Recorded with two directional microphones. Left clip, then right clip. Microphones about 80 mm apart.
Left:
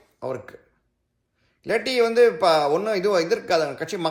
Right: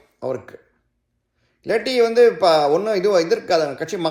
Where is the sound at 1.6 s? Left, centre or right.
Left.